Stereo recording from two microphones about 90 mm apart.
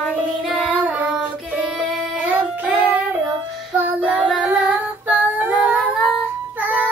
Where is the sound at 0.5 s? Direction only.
15° right (ahead or behind).